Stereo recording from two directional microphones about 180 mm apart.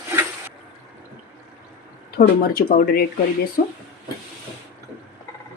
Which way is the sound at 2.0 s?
55° left (ahead or behind).